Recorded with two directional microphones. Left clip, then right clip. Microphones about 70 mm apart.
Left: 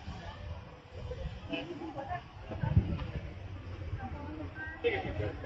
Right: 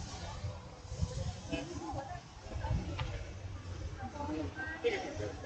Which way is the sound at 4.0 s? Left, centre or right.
Right.